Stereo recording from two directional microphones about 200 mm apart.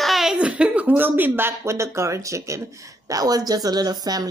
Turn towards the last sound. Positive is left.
turn(degrees=-20)  # may be behind; listen again after turning